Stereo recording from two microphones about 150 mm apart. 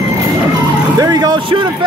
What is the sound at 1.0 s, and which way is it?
Speech, 25° right (ahead or behind).